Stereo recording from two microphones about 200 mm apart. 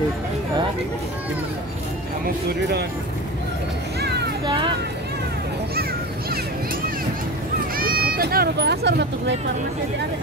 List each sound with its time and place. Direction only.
7.7 s speech: 45° right (ahead or behind)